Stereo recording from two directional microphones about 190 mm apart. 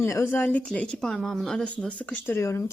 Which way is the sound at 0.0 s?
15° left (ahead or behind).